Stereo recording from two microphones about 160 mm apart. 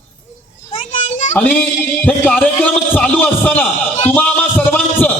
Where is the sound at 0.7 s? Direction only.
50° left (ahead or behind).